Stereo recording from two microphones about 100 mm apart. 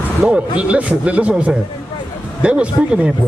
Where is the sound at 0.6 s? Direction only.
15° right (ahead or behind).